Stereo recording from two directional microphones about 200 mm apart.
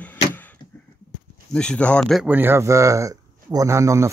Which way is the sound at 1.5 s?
5° left (ahead or behind).